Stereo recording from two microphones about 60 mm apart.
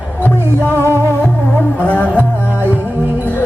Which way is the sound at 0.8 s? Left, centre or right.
Right.